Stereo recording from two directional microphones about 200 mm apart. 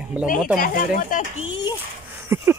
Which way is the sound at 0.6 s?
40° left (ahead or behind).